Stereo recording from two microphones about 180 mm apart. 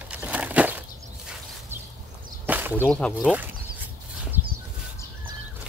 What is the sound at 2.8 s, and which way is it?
Speech, 5° left (ahead or behind).